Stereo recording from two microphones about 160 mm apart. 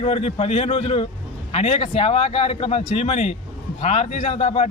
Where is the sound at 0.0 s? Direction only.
35° left (ahead or behind).